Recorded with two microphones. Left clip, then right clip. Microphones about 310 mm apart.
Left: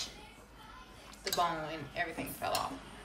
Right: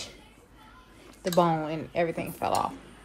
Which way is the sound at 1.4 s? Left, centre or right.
Centre.